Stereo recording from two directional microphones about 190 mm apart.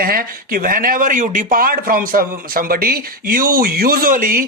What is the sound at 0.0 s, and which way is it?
Speech, 50° right (ahead or behind).